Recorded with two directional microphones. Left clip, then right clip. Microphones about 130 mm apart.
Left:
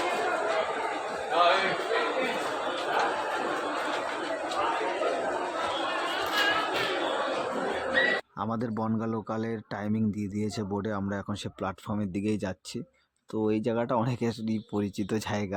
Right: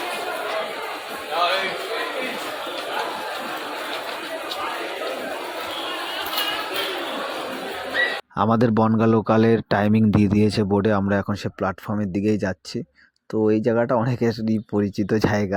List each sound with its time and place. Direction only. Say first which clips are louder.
8.4 s speech: right 13 dB; 60° right (ahead or behind)
11.6 s speech: right 8 dB; 35° right (ahead or behind)